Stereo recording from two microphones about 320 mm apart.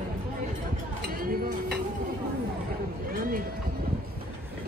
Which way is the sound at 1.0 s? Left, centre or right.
Right.